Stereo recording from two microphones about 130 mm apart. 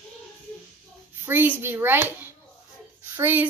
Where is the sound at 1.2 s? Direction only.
15° right (ahead or behind).